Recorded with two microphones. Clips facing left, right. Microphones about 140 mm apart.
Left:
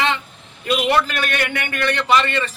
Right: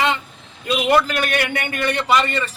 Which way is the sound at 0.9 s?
10° right (ahead or behind).